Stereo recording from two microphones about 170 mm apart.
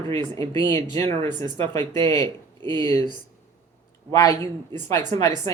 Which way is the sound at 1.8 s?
25° right (ahead or behind).